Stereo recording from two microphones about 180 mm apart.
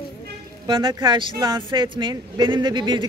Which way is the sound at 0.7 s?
25° right (ahead or behind).